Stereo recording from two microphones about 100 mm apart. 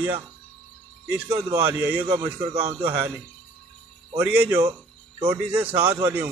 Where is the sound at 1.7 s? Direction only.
15° right (ahead or behind).